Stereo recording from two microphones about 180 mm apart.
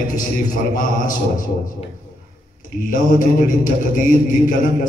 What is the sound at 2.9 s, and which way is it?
A man's voice, 50° left (ahead or behind).